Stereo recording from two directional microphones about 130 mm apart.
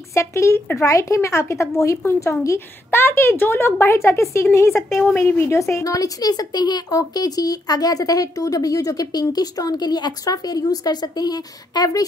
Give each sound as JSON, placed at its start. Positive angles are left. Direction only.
{"t": 0.1, "sound": "speech", "side_deg": 20}